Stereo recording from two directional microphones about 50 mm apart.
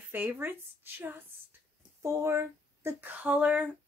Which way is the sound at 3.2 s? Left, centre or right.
Right.